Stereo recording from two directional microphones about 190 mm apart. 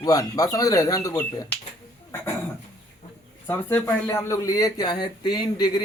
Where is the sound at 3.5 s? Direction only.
10° left (ahead or behind).